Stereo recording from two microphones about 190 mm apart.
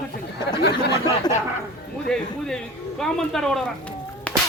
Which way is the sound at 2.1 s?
5° left (ahead or behind).